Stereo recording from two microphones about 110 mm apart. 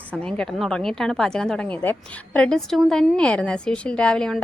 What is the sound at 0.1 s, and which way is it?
A woman's voice, 10° left (ahead or behind).